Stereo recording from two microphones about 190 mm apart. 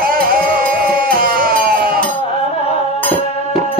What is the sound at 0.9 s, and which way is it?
Music, 50° right (ahead or behind).